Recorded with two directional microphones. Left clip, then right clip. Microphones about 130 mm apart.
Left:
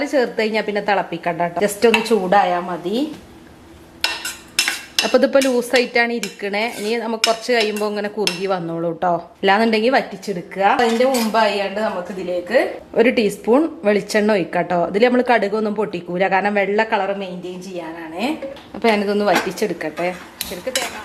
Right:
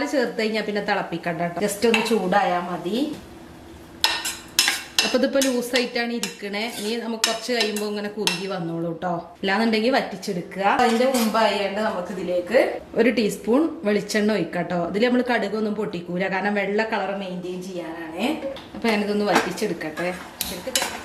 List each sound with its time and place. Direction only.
0.0 s a woman's voice: 15° left (ahead or behind)
5.1 s a woman's voice: 15° left (ahead or behind)